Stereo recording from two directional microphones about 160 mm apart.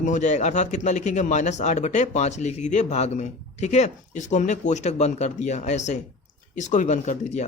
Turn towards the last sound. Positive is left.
turn(degrees=45)  # may be behind; listen again after turning